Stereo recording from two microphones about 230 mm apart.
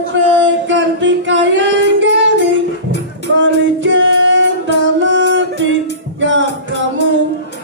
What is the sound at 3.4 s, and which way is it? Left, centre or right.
Music, right.